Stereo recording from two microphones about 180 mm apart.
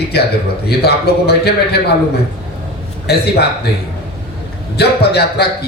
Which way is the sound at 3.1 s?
65° left (ahead or behind).